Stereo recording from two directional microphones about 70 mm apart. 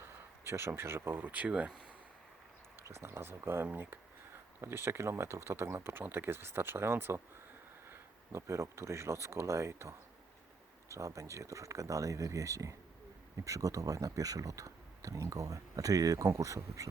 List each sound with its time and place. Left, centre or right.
0.0 s speech: right; by 1.7 s centre
2.8 s speech: right
10.9 s speech: right